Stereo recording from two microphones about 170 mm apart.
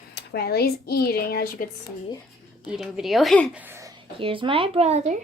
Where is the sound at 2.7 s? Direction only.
5° right (ahead or behind).